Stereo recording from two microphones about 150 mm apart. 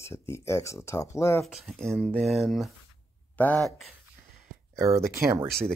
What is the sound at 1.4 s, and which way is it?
Speech, centre (ahead or behind).